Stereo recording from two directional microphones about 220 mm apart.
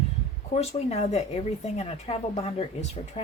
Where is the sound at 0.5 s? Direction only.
30° left (ahead or behind).